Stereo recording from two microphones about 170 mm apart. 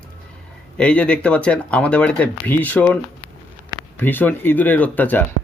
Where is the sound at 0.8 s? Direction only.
5° left (ahead or behind).